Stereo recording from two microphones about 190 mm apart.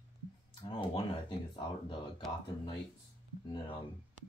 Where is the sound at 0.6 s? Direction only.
25° left (ahead or behind).